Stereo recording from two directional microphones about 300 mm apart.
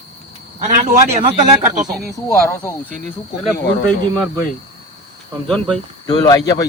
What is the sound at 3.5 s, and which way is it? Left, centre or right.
Speech, left.